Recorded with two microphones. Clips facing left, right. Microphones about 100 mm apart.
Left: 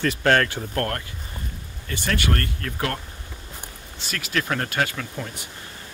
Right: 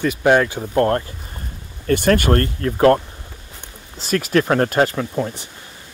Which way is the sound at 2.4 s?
35° right (ahead or behind).